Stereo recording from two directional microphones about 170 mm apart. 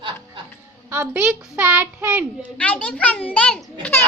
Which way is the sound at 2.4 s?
5° left (ahead or behind).